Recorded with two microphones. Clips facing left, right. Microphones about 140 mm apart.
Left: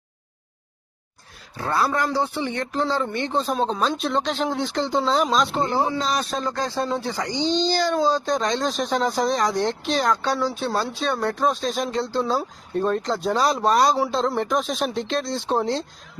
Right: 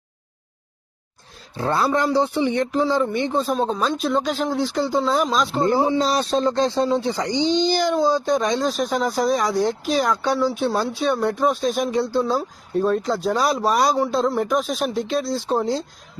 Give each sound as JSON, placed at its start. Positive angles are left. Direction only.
{"t": 1.5, "sound": "speech", "side_deg": -25}
{"t": 6.0, "sound": "speech", "side_deg": -30}
{"t": 12.2, "sound": "speech", "side_deg": 0}